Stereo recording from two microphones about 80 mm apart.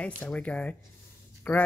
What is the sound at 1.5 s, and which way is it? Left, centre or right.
Speech, left.